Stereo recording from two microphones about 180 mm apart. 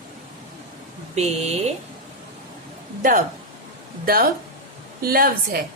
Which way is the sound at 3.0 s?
50° right (ahead or behind).